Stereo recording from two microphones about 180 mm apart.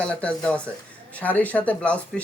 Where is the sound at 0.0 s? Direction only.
5° left (ahead or behind).